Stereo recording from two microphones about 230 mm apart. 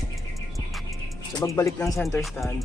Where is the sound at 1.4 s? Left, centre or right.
Centre.